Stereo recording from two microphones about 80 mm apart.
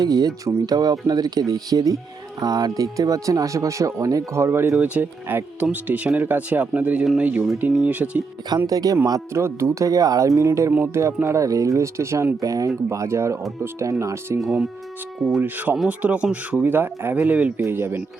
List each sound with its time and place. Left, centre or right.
0.0 s speech: right
4.8 s speech: centre
8.4 s speech: right
9.3 s speech: right
14.3 s speech: centre
15.4 s speech: right
17.6 s speech: right